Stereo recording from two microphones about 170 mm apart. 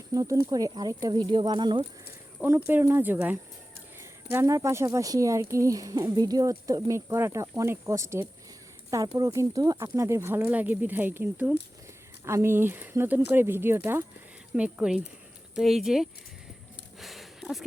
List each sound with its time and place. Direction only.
0.1 s speech: 20° right (ahead or behind)
2.4 s speech: 10° right (ahead or behind)
17.0 s a sound: centre (ahead or behind)